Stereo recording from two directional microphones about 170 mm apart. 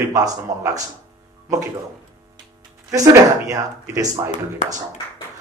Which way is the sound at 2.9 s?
20° right (ahead or behind).